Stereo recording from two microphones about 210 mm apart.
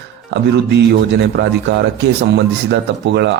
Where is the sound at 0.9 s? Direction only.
55° right (ahead or behind).